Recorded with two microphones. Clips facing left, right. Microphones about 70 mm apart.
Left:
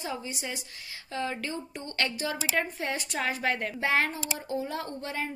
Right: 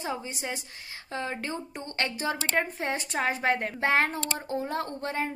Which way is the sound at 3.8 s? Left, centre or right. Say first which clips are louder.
Right 2 dB; right.